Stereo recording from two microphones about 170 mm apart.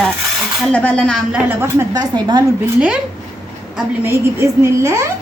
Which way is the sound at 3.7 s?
15° right (ahead or behind).